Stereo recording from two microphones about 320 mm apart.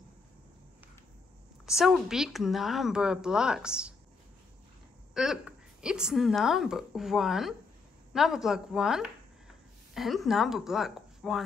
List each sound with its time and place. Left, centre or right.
1.8 s a woman's voice: centre
5.1 s a woman's voice: centre